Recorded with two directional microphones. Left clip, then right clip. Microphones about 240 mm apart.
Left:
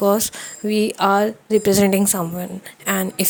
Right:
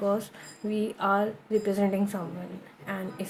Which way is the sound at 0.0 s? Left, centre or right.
Left.